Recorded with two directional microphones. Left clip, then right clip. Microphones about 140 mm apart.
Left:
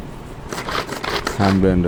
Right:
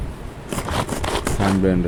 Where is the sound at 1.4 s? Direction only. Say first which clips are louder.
Left 4 dB; 20° left (ahead or behind).